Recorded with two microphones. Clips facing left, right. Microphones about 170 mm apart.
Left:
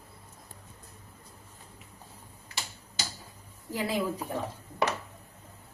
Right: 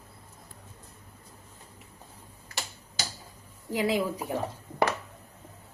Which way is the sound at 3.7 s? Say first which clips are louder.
Right 3 dB; 15° right (ahead or behind).